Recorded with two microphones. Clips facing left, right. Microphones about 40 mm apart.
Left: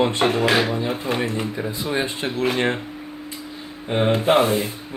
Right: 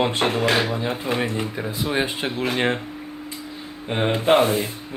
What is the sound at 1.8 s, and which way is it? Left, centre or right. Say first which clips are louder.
Speech: right 1 dB; right.